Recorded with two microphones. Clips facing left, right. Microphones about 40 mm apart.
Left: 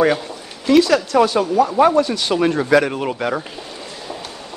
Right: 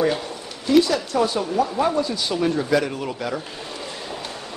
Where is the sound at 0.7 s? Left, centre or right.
Left.